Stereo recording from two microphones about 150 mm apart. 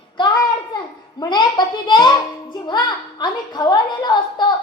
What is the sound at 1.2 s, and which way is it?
A child's voice, 30° left (ahead or behind).